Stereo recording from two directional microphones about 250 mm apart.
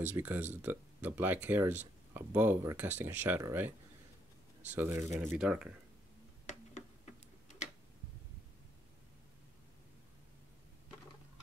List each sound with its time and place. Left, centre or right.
0.0 s speech: centre
4.7 s speech: centre
7.4 s tick-tock: left